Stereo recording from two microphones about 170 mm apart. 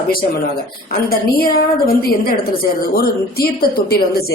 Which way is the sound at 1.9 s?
60° left (ahead or behind).